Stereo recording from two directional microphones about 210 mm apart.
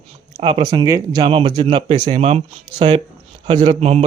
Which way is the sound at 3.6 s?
30° right (ahead or behind).